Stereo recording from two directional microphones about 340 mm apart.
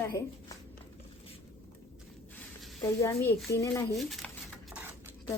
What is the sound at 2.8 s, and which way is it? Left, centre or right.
Speech, centre.